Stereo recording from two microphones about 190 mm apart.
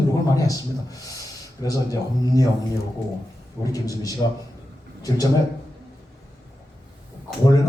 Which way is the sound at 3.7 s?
20° left (ahead or behind).